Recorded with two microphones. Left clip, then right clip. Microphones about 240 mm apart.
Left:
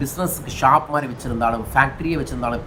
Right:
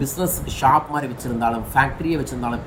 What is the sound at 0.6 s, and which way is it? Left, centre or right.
Speech, centre.